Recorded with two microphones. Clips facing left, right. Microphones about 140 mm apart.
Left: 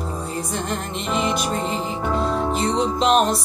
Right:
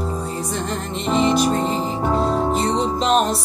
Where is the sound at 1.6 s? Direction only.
35° right (ahead or behind).